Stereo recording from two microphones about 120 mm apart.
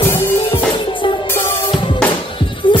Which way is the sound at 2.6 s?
45° left (ahead or behind).